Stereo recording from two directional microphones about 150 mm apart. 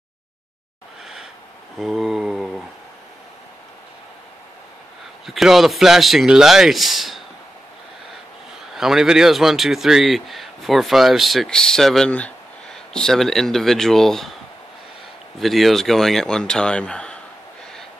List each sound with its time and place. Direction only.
1.8 s mantra: centre (ahead or behind)
5.2 s a man's voice: centre (ahead or behind)
8.7 s a man's voice: 5° right (ahead or behind)
15.3 s a man's voice: centre (ahead or behind)